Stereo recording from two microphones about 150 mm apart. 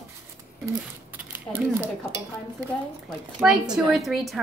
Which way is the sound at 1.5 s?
15° right (ahead or behind).